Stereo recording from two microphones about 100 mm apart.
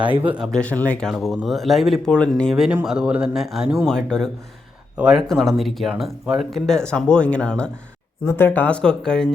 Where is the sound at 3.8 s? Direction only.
5° left (ahead or behind).